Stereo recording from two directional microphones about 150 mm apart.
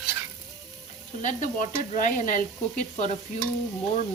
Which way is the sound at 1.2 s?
55° left (ahead or behind).